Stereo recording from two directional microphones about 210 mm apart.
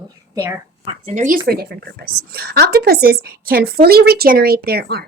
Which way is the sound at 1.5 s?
50° right (ahead or behind).